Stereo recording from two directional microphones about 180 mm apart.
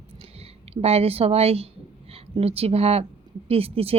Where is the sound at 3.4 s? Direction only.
30° right (ahead or behind).